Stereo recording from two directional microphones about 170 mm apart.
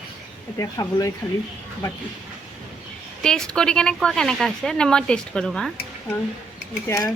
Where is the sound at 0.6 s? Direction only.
20° left (ahead or behind).